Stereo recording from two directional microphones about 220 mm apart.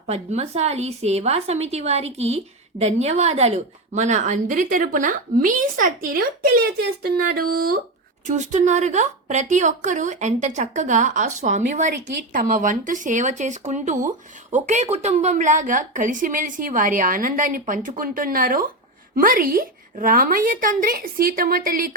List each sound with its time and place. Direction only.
0.1 s a woman's voice: 30° right (ahead or behind)
7.3 s a woman's voice: 40° right (ahead or behind)